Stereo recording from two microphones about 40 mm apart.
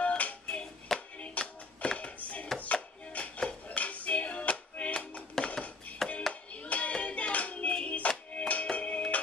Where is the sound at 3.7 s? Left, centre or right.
Left.